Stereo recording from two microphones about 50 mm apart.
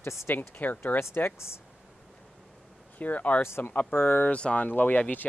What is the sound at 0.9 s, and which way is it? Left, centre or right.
Speech, left.